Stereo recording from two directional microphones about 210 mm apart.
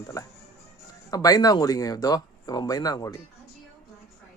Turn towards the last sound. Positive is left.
turn(degrees=15)  # may be behind; listen again after turning